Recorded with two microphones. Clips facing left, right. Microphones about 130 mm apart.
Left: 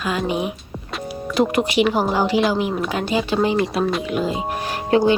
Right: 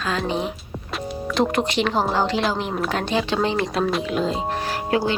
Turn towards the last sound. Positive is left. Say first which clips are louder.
# left 5 dB
turn(degrees=25)  # may be behind; listen again after turning